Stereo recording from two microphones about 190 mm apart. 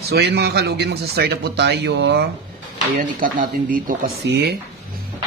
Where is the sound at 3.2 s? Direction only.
45° right (ahead or behind).